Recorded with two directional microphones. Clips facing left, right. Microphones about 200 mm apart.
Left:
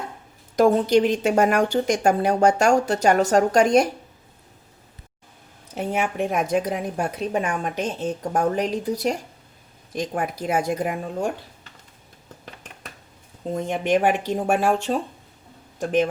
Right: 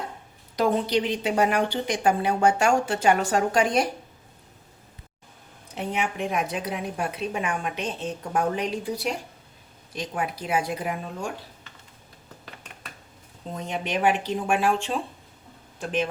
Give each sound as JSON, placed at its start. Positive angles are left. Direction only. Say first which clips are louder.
{"t": 0.5, "sound": "speech", "louder": "left 6 dB", "side_deg": 45}
{"t": 5.7, "sound": "speech", "louder": "left 4 dB", "side_deg": 45}
{"t": 13.5, "sound": "speech", "louder": "left 8 dB", "side_deg": 50}